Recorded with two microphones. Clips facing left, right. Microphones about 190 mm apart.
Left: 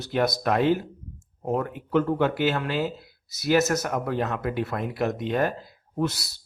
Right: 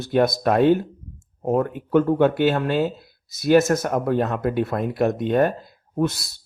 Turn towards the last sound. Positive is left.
turn(degrees=-50)  # may be behind; listen again after turning